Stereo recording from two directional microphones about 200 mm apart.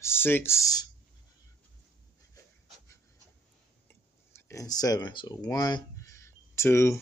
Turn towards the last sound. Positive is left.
turn(degrees=15)  # may be behind; listen again after turning